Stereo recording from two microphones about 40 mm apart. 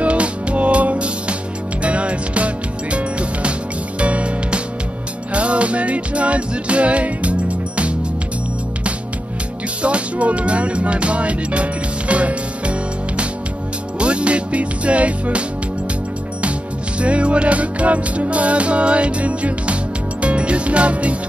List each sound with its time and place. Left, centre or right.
0.0 s music: right
9.8 s music: right
13.9 s music: right
17.0 s music: right